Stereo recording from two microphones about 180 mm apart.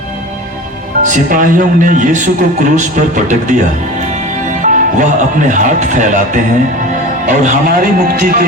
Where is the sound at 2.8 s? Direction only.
45° right (ahead or behind).